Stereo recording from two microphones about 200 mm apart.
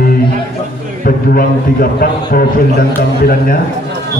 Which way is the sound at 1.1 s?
45° left (ahead or behind).